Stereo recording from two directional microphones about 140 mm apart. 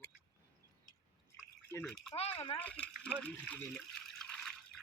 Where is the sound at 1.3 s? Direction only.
15° left (ahead or behind).